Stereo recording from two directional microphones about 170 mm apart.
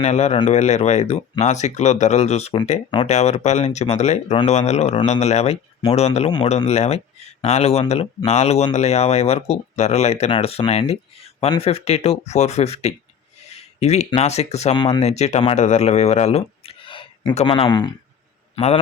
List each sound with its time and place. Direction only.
0.0 s speech: 40° left (ahead or behind)
13.5 s a sound: 40° left (ahead or behind)
14.1 s speech: 40° left (ahead or behind)
18.5 s a man's voice: 35° left (ahead or behind)